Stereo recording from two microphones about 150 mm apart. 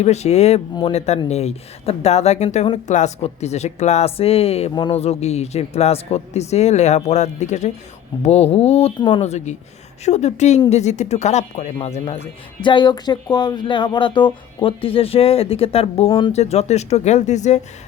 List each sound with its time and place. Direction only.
0.0 s speech: 45° left (ahead or behind)
4.7 s speech: 30° left (ahead or behind)
4.9 s speech: 45° left (ahead or behind)
9.0 s speech: 30° left (ahead or behind)
9.2 s speech: 50° left (ahead or behind)
12.6 s speech: 30° left (ahead or behind)
16.3 s speech: 45° left (ahead or behind)